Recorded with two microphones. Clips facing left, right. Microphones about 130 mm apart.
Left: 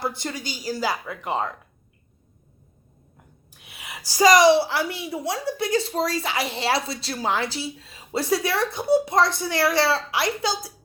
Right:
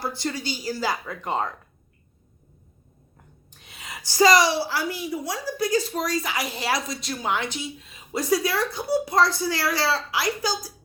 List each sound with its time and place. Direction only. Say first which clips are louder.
0.0 s a woman's voice: even; 20° left (ahead or behind)
3.6 s a woman's voice: even; 10° left (ahead or behind); by 10.7 s 25° left (ahead or behind)